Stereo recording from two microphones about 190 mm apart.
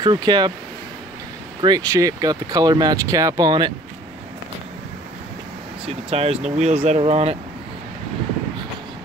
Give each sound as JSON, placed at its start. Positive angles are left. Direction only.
{"t": 0.0, "sound": "speech", "side_deg": -20}
{"t": 1.6, "sound": "speech", "side_deg": -20}
{"t": 5.9, "sound": "speech", "side_deg": -35}